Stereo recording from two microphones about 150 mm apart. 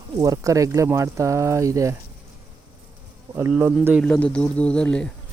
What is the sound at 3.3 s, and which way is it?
Speech, 15° right (ahead or behind).